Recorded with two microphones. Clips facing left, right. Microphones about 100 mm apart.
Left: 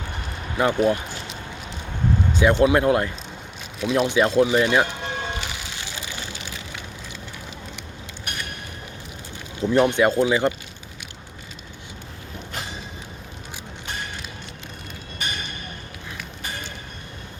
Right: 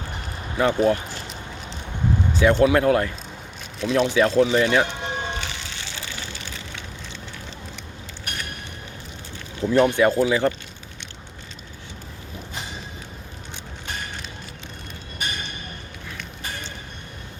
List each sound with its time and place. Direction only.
0.5 s speech: 15° left (ahead or behind)
1.1 s a sound: centre (ahead or behind)
2.3 s speech: 20° left (ahead or behind)
3.8 s speech: 5° left (ahead or behind)
4.1 s speech: 15° left (ahead or behind)
4.8 s music: 10° left (ahead or behind)
9.6 s speech: 20° left (ahead or behind)